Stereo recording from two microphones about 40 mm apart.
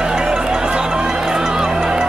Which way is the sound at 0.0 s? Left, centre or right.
Centre.